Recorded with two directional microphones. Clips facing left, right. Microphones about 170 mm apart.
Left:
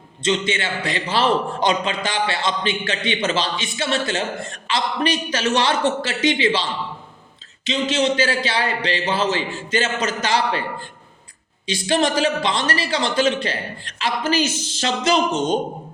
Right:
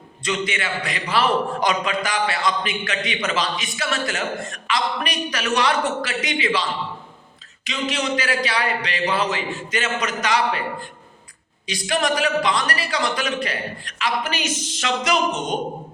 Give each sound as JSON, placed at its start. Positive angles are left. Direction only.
{"t": 0.2, "sound": "a man's voice", "side_deg": 25}
{"t": 11.6, "sound": "a man's voice", "side_deg": 30}